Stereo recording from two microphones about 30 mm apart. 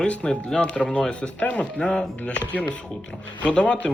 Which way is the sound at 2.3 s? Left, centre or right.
Left.